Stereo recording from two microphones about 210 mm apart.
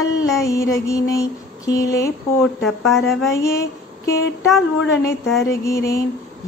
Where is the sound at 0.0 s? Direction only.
15° left (ahead or behind).